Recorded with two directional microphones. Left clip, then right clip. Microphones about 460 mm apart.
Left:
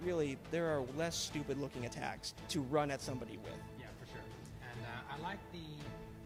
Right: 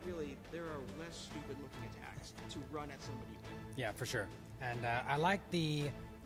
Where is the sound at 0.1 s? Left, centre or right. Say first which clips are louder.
Left 8 dB; left.